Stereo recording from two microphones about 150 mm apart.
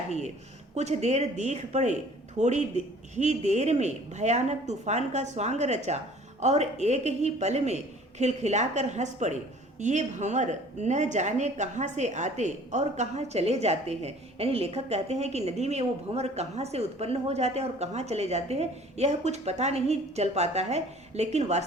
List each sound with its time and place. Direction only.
0.8 s a woman's voice: 50° right (ahead or behind)